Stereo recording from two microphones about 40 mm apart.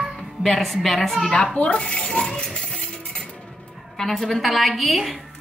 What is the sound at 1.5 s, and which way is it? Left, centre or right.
Speech, left.